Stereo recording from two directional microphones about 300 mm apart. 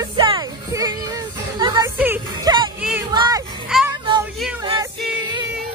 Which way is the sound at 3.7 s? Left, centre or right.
Centre.